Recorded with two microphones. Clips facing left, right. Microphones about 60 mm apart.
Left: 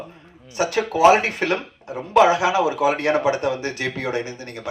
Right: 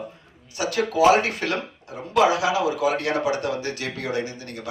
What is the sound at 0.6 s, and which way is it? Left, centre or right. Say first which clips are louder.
Speech: left 3 dB; left.